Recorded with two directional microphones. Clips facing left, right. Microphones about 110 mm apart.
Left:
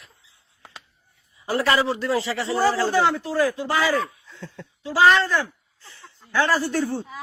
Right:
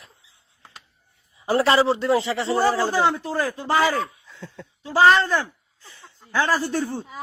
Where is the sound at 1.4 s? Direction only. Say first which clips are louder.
Right 3 dB; 30° right (ahead or behind).